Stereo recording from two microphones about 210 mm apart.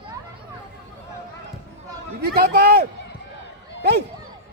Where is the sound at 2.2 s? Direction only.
50° right (ahead or behind).